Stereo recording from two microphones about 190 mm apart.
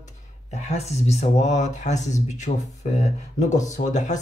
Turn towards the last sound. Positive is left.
turn(degrees=40)  # may be behind; listen again after turning